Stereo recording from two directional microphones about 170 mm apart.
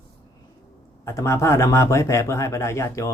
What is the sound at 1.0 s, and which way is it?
Speech, 15° left (ahead or behind).